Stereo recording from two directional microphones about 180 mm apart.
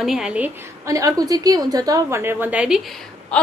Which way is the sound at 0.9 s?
20° right (ahead or behind).